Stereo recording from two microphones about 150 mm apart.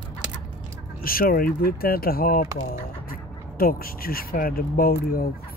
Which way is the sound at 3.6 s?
80° left.